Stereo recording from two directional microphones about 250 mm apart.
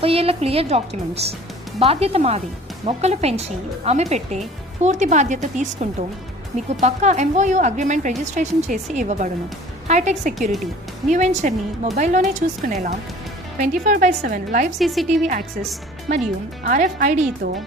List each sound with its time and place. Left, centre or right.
0.0 s a woman's voice: right
14.8 s a woman's voice: centre
16.6 s a woman's voice: right